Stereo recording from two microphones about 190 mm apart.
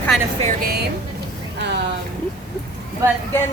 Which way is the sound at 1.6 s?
60° right (ahead or behind).